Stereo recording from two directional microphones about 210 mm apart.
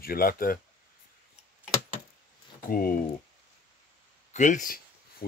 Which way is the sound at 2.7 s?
45° left (ahead or behind).